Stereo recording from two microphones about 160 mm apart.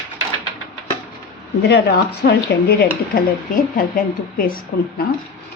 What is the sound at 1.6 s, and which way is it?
Speech, 85° left.